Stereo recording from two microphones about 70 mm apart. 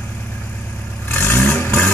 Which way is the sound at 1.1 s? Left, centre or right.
Left.